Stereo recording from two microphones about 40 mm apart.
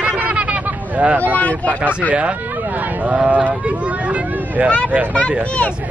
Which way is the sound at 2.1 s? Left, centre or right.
Right.